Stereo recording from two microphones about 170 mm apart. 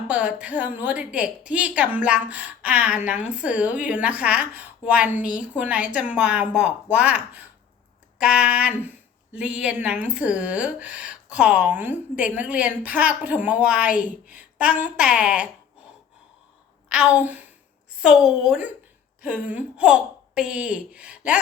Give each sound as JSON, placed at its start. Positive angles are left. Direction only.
{"t": 0.1, "sound": "speech", "side_deg": -5}
{"t": 16.9, "sound": "a woman's voice", "side_deg": -5}